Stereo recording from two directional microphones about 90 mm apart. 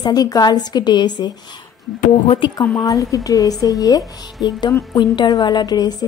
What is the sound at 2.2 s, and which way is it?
Speech, 90° left.